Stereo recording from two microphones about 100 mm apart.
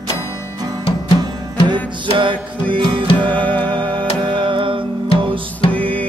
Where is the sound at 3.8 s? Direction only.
55° right (ahead or behind).